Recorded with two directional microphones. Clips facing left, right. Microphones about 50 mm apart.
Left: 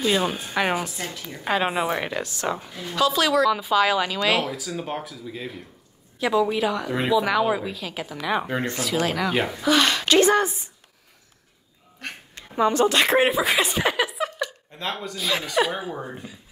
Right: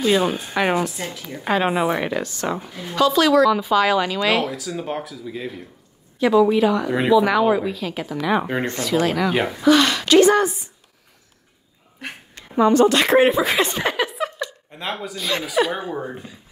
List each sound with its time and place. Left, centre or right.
0.0 s a woman's voice: centre
3.0 s a woman's voice: centre
9.8 s a woman's voice: right
12.6 s a woman's voice: right
13.2 s speech: centre
14.8 s speech: centre